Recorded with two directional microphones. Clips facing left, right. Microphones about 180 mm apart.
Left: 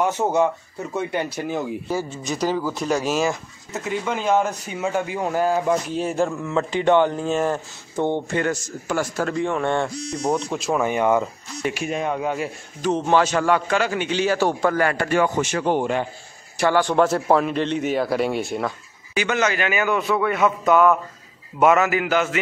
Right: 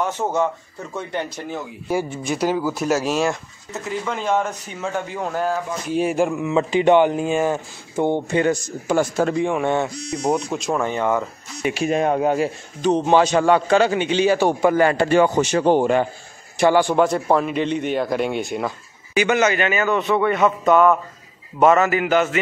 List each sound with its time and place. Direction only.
0.0 s speech: 10° left (ahead or behind)
1.9 s speech: 10° right (ahead or behind); by 5.6 s 10° left (ahead or behind)
5.9 s speech: 10° right (ahead or behind)
10.5 s speech: centre (ahead or behind)
10.9 s speech: 15° left (ahead or behind)
11.7 s speech: 30° right (ahead or behind)
12.0 s speech: 45° right (ahead or behind)
12.8 s a man's voice: 20° right (ahead or behind)
16.5 s speech: 15° right (ahead or behind)
16.9 s speech: centre (ahead or behind)
19.5 s speech: 5° left (ahead or behind)